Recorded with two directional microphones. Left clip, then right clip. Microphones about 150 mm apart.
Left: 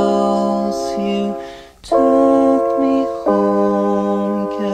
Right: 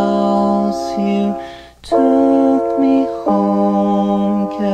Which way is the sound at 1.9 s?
15° left (ahead or behind).